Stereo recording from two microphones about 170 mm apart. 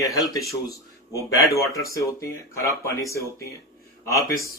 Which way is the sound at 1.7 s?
20° left (ahead or behind).